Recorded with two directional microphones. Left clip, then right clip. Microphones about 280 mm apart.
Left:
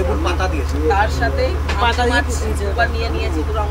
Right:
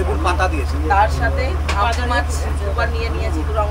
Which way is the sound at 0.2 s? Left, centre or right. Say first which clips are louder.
Right 2 dB; right.